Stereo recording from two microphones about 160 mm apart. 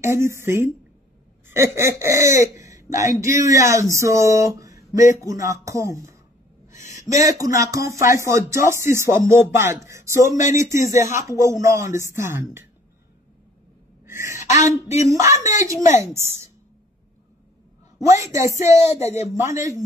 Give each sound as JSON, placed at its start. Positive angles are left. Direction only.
{"t": 0.0, "sound": "speech", "side_deg": -15}
{"t": 3.9, "sound": "music", "side_deg": -20}
{"t": 5.2, "sound": "speech", "side_deg": -20}
{"t": 14.0, "sound": "sneeze", "side_deg": -15}
{"t": 14.6, "sound": "speech", "side_deg": 45}
{"t": 15.0, "sound": "speech", "side_deg": -20}
{"t": 15.8, "sound": "speech", "side_deg": 50}
{"t": 18.3, "sound": "speech", "side_deg": -20}
{"t": 18.9, "sound": "speech", "side_deg": 45}
{"t": 19.3, "sound": "speech", "side_deg": -20}